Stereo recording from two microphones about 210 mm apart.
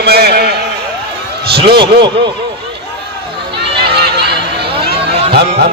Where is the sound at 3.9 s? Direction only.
50° right (ahead or behind).